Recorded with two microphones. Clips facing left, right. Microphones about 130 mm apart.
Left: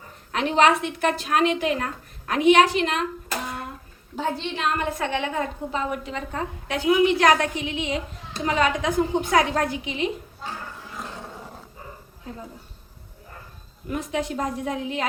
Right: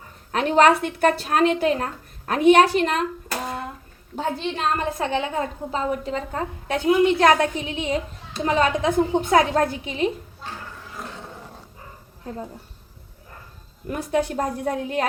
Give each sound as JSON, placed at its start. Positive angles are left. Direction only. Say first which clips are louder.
{"t": 0.3, "sound": "a woman's voice", "louder": "right 3 dB", "side_deg": -45}
{"t": 4.5, "sound": "a woman's voice", "louder": "right 1 dB", "side_deg": -35}
{"t": 9.8, "sound": "a woman's voice", "louder": "right 3 dB", "side_deg": -40}
{"t": 13.9, "sound": "a woman's voice", "louder": "right 4 dB", "side_deg": -45}